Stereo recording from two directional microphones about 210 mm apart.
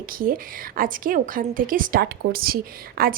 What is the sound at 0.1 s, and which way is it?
A woman's voice, 40° right (ahead or behind).